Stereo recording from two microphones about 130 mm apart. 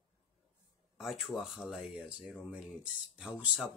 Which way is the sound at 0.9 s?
Centre (ahead or behind).